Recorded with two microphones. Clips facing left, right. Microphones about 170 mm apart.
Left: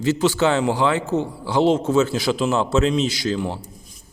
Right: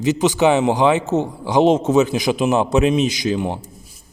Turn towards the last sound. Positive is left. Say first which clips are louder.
# right 3 dB
turn(degrees=-20)  # may be behind; listen again after turning